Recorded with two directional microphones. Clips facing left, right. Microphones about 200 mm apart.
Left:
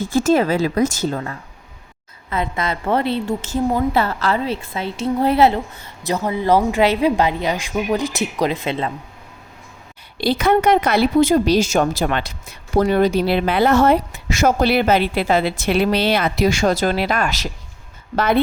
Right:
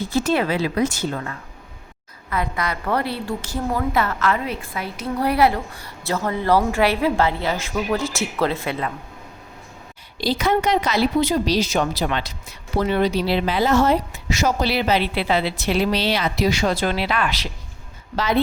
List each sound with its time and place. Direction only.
0.0 s a woman's voice: 45° left (ahead or behind); by 8.9 s 20° left (ahead or behind)
10.2 s a woman's voice: 60° left (ahead or behind)